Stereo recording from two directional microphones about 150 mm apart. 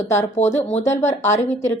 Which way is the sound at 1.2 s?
15° left (ahead or behind).